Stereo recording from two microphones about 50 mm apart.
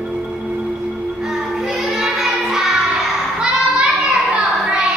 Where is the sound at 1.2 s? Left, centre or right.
Centre.